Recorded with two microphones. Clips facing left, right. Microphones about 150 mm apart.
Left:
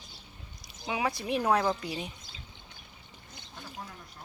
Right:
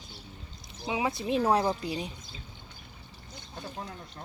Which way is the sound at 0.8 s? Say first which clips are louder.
Right 2 dB; 25° right (ahead or behind).